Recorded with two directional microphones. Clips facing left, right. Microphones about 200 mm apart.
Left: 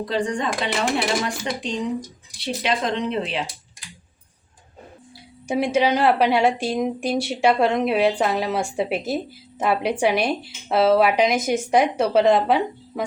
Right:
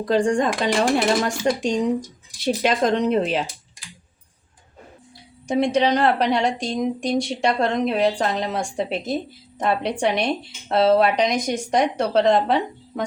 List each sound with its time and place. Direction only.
0.0 s speech: 45° right (ahead or behind)
5.5 s a woman's voice: 5° left (ahead or behind)